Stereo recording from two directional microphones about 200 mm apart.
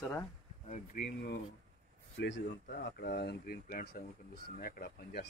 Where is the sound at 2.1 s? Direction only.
65° left (ahead or behind).